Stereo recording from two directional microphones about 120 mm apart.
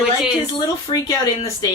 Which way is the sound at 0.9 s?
45° left (ahead or behind).